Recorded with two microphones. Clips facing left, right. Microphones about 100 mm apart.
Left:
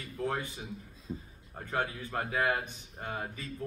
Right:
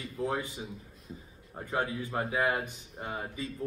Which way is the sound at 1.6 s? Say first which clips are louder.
Right 2 dB; 20° right (ahead or behind).